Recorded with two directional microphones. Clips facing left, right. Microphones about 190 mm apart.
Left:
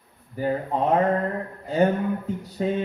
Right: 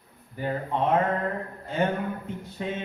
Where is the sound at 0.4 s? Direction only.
40° left (ahead or behind).